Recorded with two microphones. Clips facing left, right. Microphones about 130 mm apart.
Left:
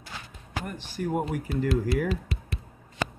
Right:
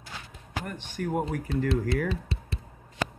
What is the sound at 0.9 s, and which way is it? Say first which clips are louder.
Speech: left 1 dB; 5° left (ahead or behind).